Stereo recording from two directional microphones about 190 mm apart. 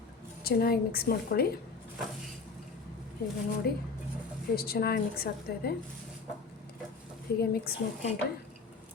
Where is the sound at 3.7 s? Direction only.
55° left (ahead or behind).